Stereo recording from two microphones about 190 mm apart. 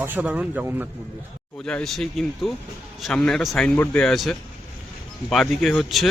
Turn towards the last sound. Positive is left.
turn(degrees=0)  # may be behind; listen again after turning